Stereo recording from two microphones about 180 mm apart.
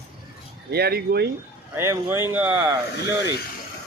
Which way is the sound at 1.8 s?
15° right (ahead or behind).